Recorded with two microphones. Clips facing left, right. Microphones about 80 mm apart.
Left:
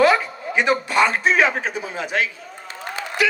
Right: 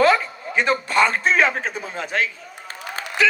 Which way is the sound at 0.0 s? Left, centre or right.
Right.